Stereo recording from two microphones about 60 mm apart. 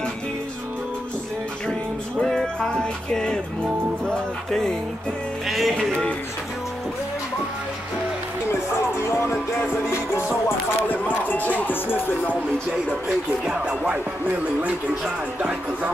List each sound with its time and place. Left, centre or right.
1.7 s music: centre
4.5 s music: centre
9.1 s music: left
10.9 s speech: left